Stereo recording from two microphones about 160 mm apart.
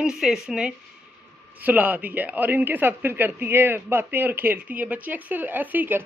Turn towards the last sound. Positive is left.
turn(degrees=-10)  # may be behind; listen again after turning